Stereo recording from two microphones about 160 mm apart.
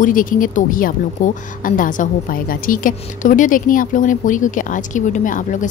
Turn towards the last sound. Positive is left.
turn(degrees=55)  # may be behind; listen again after turning